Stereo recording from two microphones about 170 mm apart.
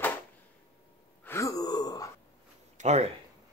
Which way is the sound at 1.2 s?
20° left (ahead or behind).